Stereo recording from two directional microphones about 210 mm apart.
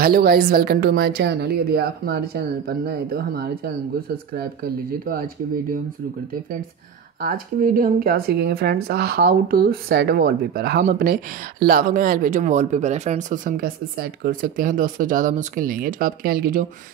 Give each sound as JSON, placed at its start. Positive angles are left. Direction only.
{"t": 0.0, "sound": "speech", "side_deg": -45}
{"t": 7.2, "sound": "speech", "side_deg": -45}